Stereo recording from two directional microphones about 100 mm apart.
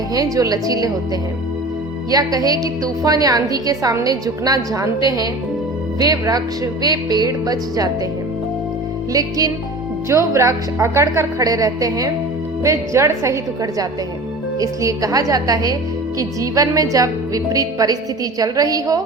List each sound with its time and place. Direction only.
0.1 s a woman's voice: 35° right (ahead or behind)
2.0 s a woman's voice: 40° right (ahead or behind)
10.1 s a woman's voice: 30° right (ahead or behind)